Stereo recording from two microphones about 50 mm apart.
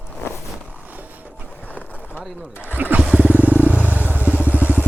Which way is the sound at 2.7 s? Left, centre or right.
Right.